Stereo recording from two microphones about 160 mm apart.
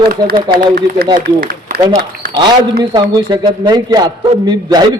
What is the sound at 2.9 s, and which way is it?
A man's voice, 30° right (ahead or behind).